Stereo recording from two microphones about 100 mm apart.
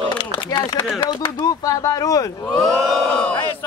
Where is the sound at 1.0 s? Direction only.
60° left (ahead or behind).